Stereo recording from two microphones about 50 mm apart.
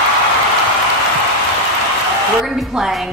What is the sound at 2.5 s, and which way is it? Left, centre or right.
Speech, centre.